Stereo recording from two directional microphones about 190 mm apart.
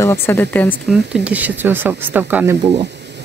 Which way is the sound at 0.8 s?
5° right (ahead or behind).